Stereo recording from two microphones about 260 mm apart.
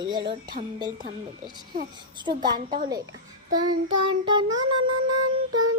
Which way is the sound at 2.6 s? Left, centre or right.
Right.